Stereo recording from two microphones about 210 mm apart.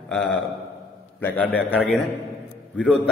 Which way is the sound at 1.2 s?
5° left (ahead or behind).